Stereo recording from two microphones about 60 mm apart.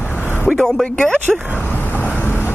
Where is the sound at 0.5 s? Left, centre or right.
Centre.